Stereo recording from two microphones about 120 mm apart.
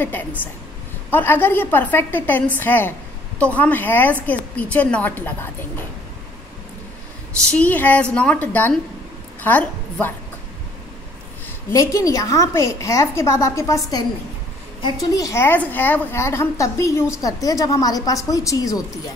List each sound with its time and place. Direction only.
0.0 s a woman's voice: 15° left (ahead or behind)
7.5 s a woman's voice: 15° left (ahead or behind)
11.7 s a woman's voice: 25° left (ahead or behind)